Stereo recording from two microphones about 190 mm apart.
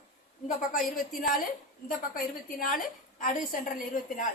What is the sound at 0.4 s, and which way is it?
Speech, 50° left (ahead or behind).